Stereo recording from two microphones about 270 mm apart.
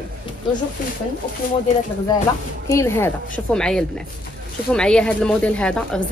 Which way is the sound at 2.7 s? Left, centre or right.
Centre.